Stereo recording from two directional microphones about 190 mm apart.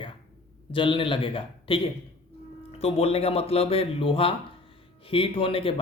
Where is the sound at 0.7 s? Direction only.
25° left (ahead or behind).